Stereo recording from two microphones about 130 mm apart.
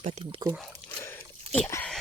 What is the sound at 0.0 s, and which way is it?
Speech, 55° right (ahead or behind).